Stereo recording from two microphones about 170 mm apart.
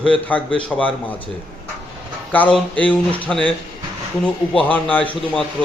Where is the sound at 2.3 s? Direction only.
10° left (ahead or behind).